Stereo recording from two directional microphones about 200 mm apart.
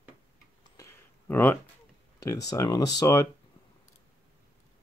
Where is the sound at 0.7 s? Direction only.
15° left (ahead or behind).